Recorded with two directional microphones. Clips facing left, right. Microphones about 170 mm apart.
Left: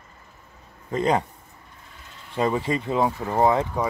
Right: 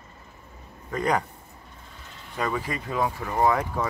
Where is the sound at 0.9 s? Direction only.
25° left (ahead or behind).